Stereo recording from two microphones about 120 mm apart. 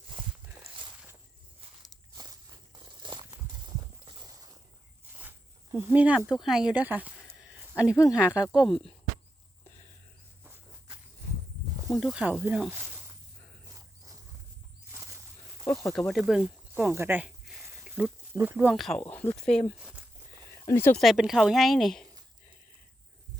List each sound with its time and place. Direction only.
2.1 s walk: 35° right (ahead or behind)
5.7 s speech: 15° right (ahead or behind)
12.1 s speech: 10° right (ahead or behind)
13.7 s wild animals: 30° right (ahead or behind)
14.9 s a sound: 25° right (ahead or behind)
15.6 s snake: 25° left (ahead or behind)
15.9 s speech: 5° left (ahead or behind)
16.7 s speech: 15° right (ahead or behind)
17.8 s a sound: 10° right (ahead or behind)
18.3 s speech: 20° right (ahead or behind)
18.7 s speech: centre (ahead or behind)
19.0 s speech: 15° left (ahead or behind)
20.7 s speech: 20° left (ahead or behind)
21.0 s speech: centre (ahead or behind)